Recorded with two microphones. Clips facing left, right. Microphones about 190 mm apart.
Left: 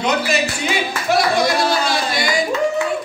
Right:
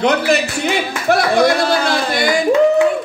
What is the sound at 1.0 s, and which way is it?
Clapping, 55° right (ahead or behind).